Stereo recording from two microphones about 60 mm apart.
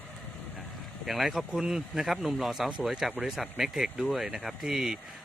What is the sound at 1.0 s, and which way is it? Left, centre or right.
Speech, centre.